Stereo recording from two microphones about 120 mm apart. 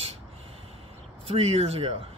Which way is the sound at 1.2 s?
55° right (ahead or behind).